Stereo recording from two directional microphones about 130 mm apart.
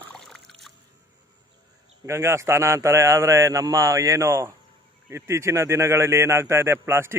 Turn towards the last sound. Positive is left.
turn(degrees=-20)  # may be behind; listen again after turning